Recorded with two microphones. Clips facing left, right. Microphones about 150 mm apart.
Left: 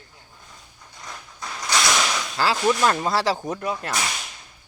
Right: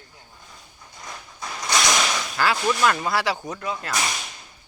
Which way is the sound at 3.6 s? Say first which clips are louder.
Left 2 dB; 5° left (ahead or behind).